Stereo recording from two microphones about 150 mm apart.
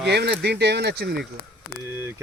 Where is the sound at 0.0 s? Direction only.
90° right.